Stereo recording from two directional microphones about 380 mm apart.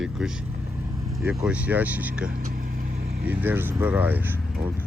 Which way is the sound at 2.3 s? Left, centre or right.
Right.